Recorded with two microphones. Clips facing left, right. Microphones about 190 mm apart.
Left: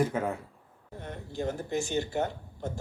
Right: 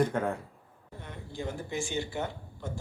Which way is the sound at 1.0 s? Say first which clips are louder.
Left 4 dB; 45° left (ahead or behind).